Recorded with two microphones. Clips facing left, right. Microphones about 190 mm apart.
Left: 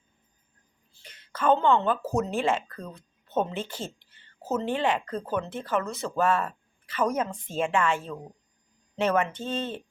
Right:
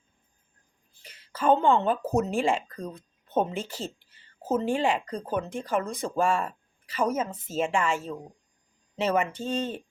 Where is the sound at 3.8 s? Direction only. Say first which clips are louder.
Right 1 dB; 45° right (ahead or behind).